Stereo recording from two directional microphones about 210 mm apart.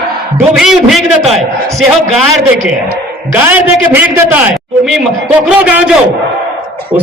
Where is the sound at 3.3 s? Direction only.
10° right (ahead or behind).